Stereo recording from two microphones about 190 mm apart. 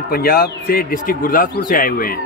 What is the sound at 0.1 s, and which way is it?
Speech, 55° left (ahead or behind).